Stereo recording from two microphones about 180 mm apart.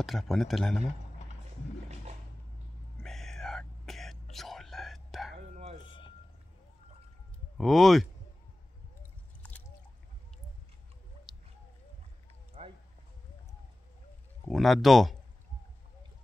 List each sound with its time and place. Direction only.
0.0 s speech: centre (ahead or behind)
3.0 s whispering: centre (ahead or behind)
5.9 s vehicle: 25° left (ahead or behind)
7.5 s speech: centre (ahead or behind)
12.6 s a sound: 40° right (ahead or behind)
14.5 s speech: centre (ahead or behind)